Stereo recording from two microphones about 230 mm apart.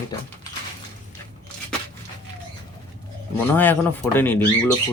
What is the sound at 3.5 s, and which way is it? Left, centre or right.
Speech, centre.